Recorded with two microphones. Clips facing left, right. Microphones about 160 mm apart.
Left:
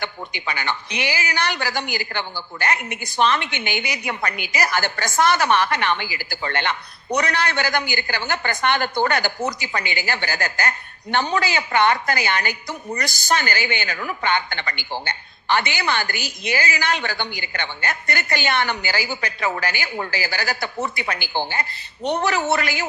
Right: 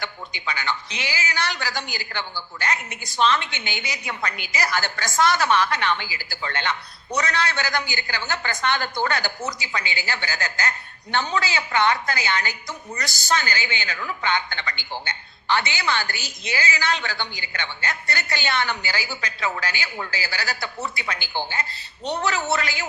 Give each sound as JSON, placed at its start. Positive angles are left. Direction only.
{"t": 0.0, "sound": "a woman's voice", "side_deg": 55}
{"t": 21.0, "sound": "a woman's voice", "side_deg": 60}